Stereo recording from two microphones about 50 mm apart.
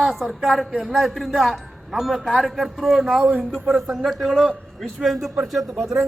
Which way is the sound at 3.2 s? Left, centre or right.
Right.